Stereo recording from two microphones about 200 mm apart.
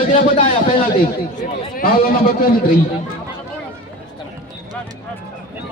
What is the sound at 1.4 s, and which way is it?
A man's voice, 45° left (ahead or behind).